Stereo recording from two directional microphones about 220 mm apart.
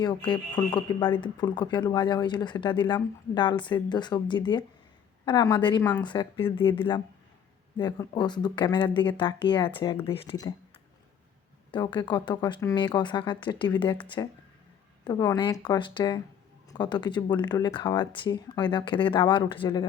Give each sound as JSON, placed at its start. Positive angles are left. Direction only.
{"t": 0.3, "sound": "speech", "side_deg": 20}
{"t": 5.8, "sound": "speech", "side_deg": 10}
{"t": 6.1, "sound": "speech", "side_deg": 20}
{"t": 6.4, "sound": "speech", "side_deg": 10}
{"t": 6.7, "sound": "speech", "side_deg": 20}
{"t": 11.7, "sound": "speech", "side_deg": 20}